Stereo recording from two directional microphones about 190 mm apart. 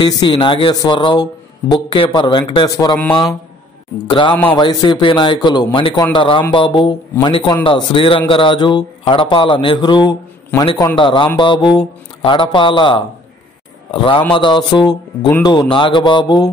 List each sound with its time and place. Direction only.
0.0 s speech: 25° left (ahead or behind)
4.1 s speech: 25° left (ahead or behind)